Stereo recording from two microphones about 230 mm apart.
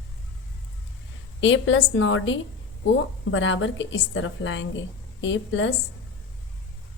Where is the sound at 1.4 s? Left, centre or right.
Left.